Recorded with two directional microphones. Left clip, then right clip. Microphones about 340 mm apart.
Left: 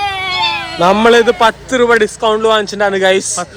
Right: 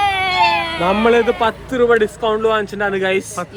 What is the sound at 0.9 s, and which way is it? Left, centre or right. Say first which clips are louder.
A man's voice: left 6 dB; left.